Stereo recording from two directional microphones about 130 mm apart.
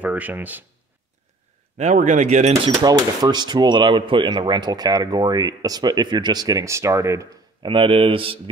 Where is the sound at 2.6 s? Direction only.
30° right (ahead or behind).